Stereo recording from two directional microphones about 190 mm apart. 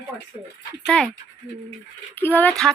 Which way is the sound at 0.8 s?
5° left (ahead or behind).